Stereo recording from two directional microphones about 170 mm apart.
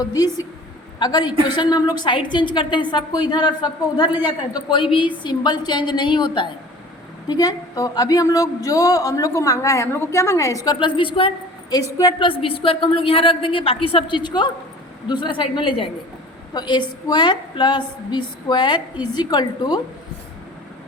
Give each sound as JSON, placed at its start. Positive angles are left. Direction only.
{"t": 0.0, "sound": "a man's voice", "side_deg": 20}